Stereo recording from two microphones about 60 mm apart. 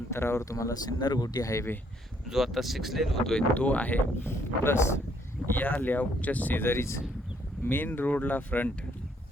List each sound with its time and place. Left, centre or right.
0.1 s speech: left
0.4 s speech: left
2.3 s speech: centre
3.5 s speech: left
4.3 s speech: left
5.5 s speech: left
7.6 s speech: left